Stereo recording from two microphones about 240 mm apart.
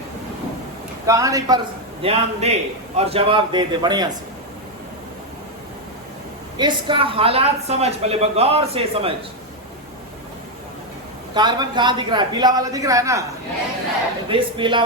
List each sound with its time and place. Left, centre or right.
1.0 s a man's voice: centre
6.6 s a man's voice: centre
11.3 s speech: centre
14.3 s a man's voice: centre